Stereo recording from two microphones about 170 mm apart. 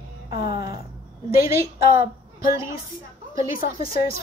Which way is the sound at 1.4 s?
15° right (ahead or behind).